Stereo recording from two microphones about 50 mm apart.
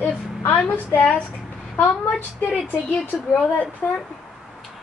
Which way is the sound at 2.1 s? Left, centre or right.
Left.